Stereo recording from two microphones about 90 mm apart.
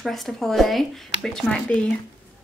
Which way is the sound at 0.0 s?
Centre (ahead or behind).